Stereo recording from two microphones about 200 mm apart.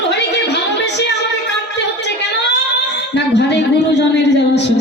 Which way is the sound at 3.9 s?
60° left (ahead or behind).